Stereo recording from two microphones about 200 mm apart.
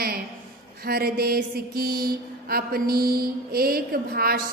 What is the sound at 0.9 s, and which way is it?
Mantra, 50° right (ahead or behind).